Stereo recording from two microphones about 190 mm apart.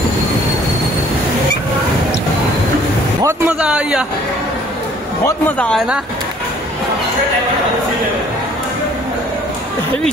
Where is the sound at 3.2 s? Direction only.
10° right (ahead or behind).